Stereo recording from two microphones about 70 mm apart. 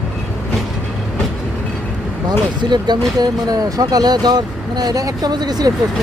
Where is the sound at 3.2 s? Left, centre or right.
Right.